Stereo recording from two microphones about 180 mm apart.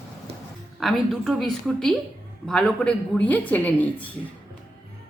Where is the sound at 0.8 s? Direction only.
Centre (ahead or behind).